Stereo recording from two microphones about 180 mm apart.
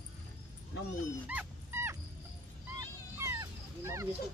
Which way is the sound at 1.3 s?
10° right (ahead or behind).